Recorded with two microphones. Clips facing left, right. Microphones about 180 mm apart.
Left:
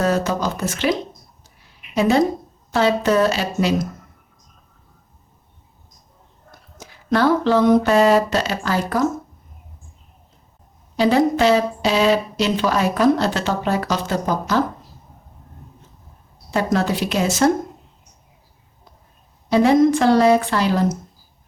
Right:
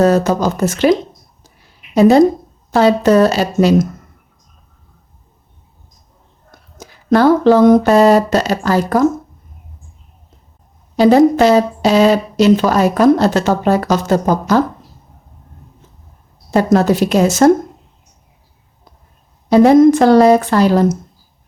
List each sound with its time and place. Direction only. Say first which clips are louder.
0.0 s speech: right 7 dB; 40° right (ahead or behind)
2.0 s speech: right 8 dB; 40° right (ahead or behind)
6.7 s speech: right 7 dB; 45° right (ahead or behind)
10.9 s speech: right 7 dB; 40° right (ahead or behind)
16.5 s speech: right 8 dB; 40° right (ahead or behind)
19.5 s speech: right 7 dB; 45° right (ahead or behind)